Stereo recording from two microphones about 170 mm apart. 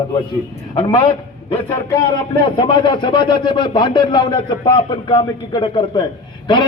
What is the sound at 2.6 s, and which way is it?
A man's voice, 25° left (ahead or behind).